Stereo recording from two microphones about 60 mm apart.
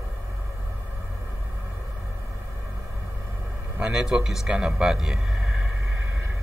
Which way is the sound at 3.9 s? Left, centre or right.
Centre.